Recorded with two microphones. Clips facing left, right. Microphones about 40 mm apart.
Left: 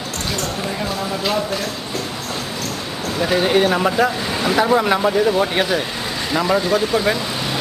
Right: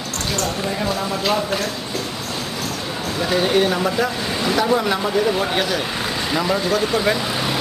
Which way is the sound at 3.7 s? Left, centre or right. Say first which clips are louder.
Left 3 dB; left.